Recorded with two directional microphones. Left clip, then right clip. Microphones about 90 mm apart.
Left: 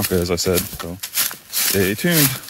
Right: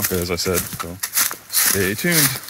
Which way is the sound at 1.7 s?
25° left (ahead or behind).